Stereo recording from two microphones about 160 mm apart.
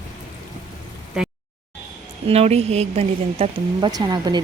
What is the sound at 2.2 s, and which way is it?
A woman's voice, 40° right (ahead or behind).